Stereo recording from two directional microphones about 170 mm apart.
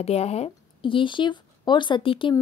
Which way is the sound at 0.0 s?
40° left (ahead or behind).